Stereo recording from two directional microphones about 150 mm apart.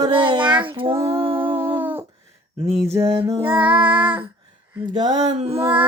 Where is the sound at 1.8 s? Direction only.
15° right (ahead or behind).